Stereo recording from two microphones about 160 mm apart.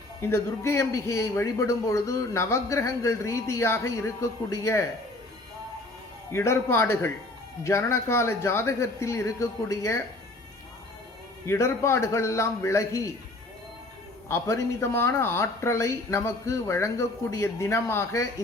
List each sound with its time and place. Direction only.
0.2 s a man's voice: 15° left (ahead or behind)
6.3 s a man's voice: 15° left (ahead or behind)
11.4 s a man's voice: 15° left (ahead or behind)
14.3 s a man's voice: 15° left (ahead or behind)